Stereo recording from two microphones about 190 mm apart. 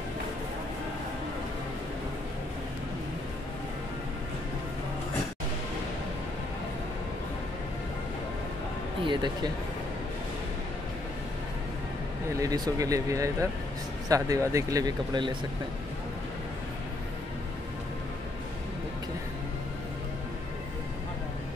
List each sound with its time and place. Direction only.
9.0 s speech: 25° right (ahead or behind)
12.4 s speech: 20° right (ahead or behind)